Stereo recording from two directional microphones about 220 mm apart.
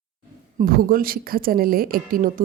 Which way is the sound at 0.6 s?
40° right (ahead or behind).